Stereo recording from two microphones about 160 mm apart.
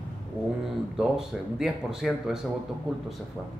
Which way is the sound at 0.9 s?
5° right (ahead or behind).